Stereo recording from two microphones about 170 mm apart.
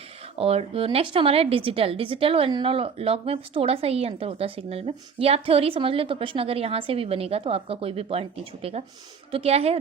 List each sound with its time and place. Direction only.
0.3 s a woman's voice: 35° right (ahead or behind)